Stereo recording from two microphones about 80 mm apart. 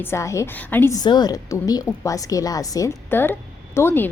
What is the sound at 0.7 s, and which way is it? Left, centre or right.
Speech, left.